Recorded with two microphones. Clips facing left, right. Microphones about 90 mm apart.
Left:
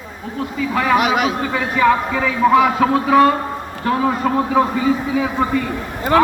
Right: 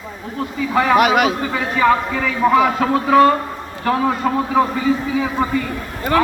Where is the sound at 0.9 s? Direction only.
55° right (ahead or behind).